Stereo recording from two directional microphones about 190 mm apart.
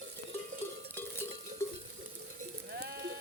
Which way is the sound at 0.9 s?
10° left (ahead or behind).